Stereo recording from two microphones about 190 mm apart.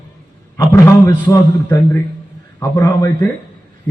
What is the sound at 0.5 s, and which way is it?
A man's voice, 15° left (ahead or behind).